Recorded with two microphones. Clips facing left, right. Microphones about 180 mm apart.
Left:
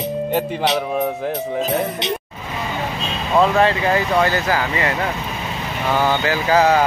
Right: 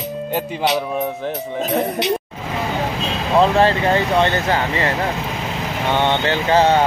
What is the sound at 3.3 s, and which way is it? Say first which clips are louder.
Speech: right 1 dB; 30° right (ahead or behind).